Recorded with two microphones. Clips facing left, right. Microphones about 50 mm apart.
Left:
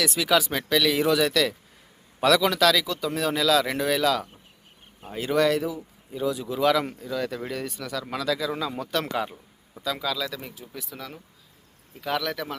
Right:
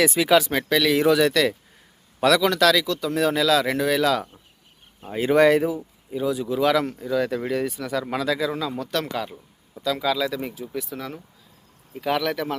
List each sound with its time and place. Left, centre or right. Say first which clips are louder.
0.0 s speech: right 5 dB; centre
5.3 s speech: right 5 dB; right
6.1 s speech: right 3 dB; centre
8.5 s speech: right 2 dB; centre
10.0 s speech: right 6 dB; centre